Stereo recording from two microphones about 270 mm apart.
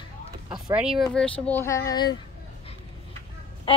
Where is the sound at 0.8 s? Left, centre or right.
Centre.